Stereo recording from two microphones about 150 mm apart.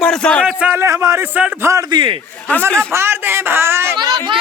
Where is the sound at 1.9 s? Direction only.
35° right (ahead or behind).